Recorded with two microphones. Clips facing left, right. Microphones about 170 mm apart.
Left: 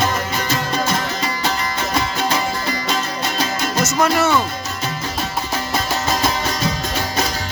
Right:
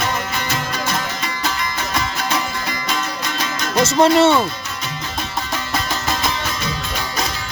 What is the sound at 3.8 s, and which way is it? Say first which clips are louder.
Speech: right 5 dB; 25° right (ahead or behind).